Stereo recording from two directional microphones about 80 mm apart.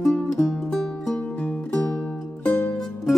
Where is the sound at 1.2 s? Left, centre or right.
Centre.